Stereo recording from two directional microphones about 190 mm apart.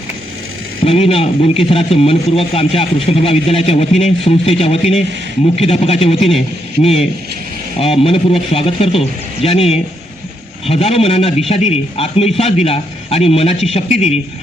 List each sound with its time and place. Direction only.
0.9 s a man's voice: 30° left (ahead or behind)